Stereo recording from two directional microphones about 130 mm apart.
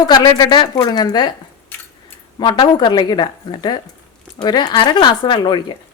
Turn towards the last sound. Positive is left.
turn(degrees=35)  # may be behind; listen again after turning